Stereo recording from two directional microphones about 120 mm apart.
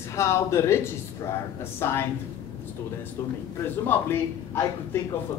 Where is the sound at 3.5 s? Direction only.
15° left (ahead or behind).